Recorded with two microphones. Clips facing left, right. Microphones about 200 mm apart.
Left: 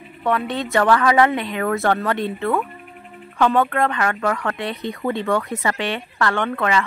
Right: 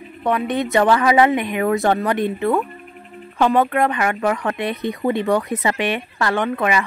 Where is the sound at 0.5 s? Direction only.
20° right (ahead or behind).